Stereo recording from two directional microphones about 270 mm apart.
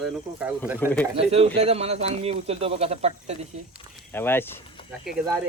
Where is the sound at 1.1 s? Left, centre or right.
Right.